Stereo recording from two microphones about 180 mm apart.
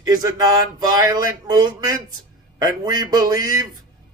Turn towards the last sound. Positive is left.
turn(degrees=-20)  # may be behind; listen again after turning